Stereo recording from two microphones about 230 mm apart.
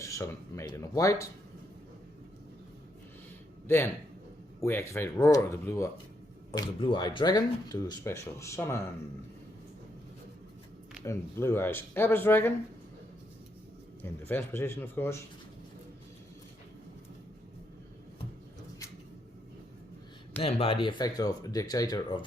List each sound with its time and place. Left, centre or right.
0.0 s speech: centre
4.6 s speech: centre
11.0 s speech: centre
14.0 s speech: centre
20.4 s speech: left